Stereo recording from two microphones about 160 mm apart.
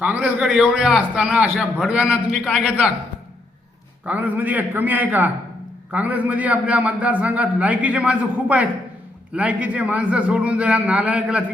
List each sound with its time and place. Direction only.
0.0 s a man's voice: 10° right (ahead or behind)
4.0 s a man's voice: 10° right (ahead or behind)